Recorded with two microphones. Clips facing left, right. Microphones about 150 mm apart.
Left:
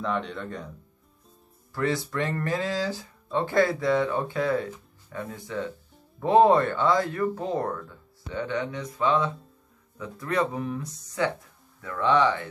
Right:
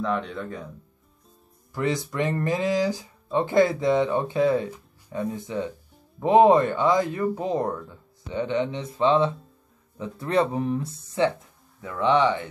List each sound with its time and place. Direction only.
0.0 s speech: centre (ahead or behind)
1.7 s speech: 20° right (ahead or behind)